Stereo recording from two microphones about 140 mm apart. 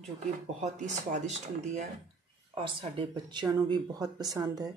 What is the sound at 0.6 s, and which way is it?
Speech, 60° right (ahead or behind).